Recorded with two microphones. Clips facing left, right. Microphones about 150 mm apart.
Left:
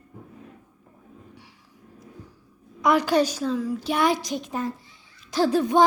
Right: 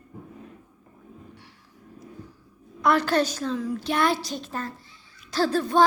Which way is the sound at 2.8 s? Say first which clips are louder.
Left 2 dB; 10° left (ahead or behind).